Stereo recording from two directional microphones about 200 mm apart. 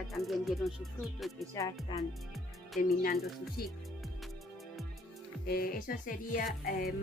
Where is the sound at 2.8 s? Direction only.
40° left (ahead or behind).